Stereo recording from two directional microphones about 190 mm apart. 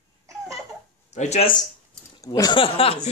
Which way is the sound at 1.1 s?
35° left (ahead or behind).